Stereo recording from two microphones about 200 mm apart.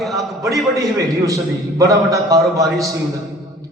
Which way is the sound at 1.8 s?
15° right (ahead or behind).